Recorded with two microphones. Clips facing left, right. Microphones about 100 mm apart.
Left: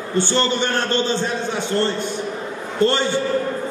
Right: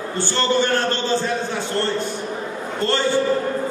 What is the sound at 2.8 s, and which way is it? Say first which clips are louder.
Speech: left 3 dB; 20° left (ahead or behind).